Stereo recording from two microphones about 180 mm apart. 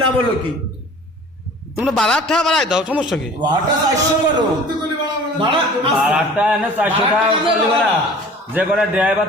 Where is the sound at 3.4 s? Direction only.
25° right (ahead or behind).